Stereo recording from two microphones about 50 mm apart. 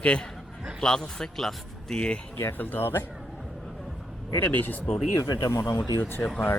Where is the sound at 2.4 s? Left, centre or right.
Left.